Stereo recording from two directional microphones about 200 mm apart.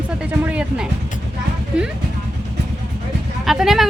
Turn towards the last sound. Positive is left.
turn(degrees=0)  # may be behind; listen again after turning